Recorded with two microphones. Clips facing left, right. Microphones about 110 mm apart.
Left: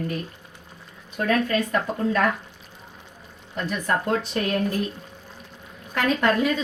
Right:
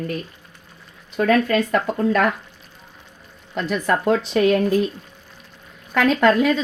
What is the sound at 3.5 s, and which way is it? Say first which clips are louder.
A woman's voice: right 4 dB; 90° right.